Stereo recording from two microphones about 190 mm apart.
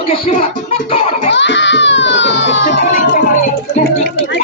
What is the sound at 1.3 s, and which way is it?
A child's voice, 70° left (ahead or behind).